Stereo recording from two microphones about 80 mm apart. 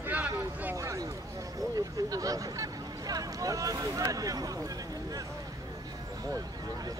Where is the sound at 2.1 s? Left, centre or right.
Right.